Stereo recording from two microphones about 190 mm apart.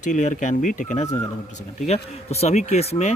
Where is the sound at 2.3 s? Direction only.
35° left (ahead or behind).